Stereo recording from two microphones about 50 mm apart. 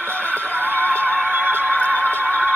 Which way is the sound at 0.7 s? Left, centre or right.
Left.